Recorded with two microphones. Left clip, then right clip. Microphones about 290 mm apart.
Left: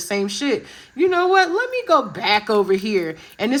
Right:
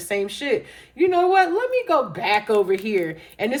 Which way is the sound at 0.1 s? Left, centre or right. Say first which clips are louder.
Left 1 dB; left.